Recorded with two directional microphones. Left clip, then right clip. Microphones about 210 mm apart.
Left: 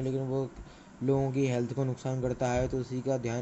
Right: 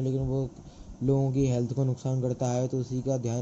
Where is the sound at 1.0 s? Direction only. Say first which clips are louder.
Right 1 dB; 5° left (ahead or behind).